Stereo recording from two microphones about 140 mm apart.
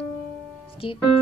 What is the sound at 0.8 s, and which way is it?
Speech, 40° left (ahead or behind).